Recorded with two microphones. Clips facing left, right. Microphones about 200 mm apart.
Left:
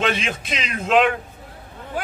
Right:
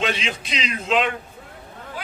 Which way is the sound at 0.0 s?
50° left (ahead or behind).